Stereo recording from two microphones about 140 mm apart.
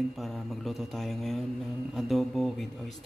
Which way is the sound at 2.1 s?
Centre (ahead or behind).